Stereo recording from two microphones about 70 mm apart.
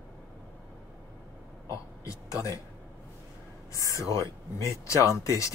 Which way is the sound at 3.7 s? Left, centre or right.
Left.